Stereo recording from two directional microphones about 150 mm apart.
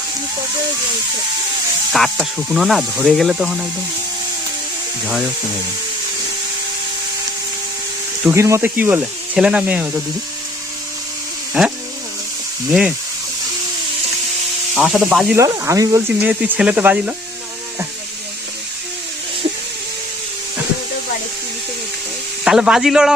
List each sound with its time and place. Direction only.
1.9 s speech: centre (ahead or behind)
5.0 s speech: 5° right (ahead or behind)
8.3 s speech: 20° right (ahead or behind)
11.6 s speech: 5° right (ahead or behind)
14.8 s speech: 5° right (ahead or behind)
15.4 s speech: 20° right (ahead or behind)
16.2 s speech: 5° right (ahead or behind)
22.4 s speech: 5° right (ahead or behind)